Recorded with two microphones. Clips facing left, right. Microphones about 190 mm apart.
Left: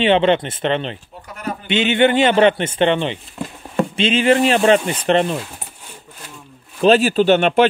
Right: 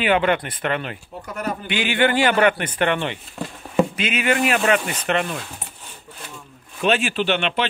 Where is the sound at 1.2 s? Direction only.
45° right (ahead or behind).